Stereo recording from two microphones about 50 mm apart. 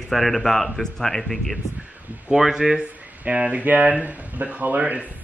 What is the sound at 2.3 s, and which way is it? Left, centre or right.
Speech, centre.